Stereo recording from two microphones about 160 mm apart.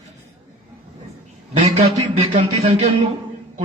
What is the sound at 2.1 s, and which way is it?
Speech, 30° right (ahead or behind).